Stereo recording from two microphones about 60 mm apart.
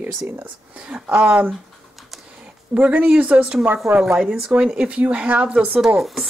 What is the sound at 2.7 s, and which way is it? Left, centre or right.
Speech, right.